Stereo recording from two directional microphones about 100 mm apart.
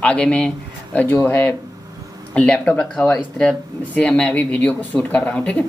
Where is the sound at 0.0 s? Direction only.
10° left (ahead or behind).